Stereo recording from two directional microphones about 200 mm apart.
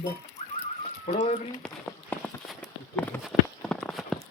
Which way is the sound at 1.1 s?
35° left (ahead or behind).